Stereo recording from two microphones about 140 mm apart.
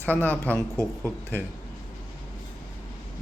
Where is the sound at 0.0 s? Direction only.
15° left (ahead or behind).